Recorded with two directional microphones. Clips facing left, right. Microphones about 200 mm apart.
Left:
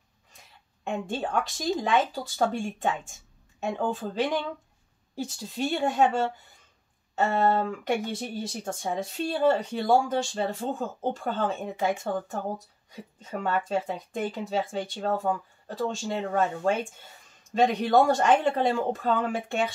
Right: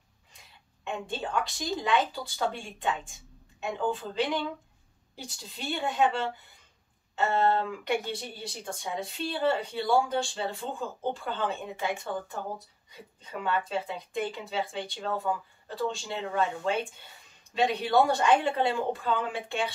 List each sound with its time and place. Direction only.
0.8 s speech: 45° left (ahead or behind)